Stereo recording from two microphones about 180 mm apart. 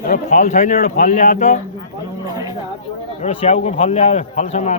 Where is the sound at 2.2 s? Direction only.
20° right (ahead or behind).